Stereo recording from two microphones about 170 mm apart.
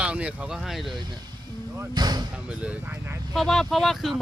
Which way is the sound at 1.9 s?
25° right (ahead or behind).